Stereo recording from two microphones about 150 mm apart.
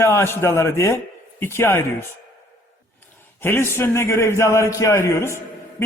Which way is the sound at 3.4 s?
15° left (ahead or behind).